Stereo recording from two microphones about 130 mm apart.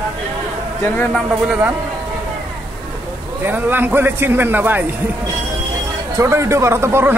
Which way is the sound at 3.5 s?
15° right (ahead or behind).